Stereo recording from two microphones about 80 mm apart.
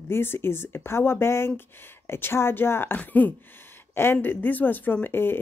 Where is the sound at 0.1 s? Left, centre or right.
Left.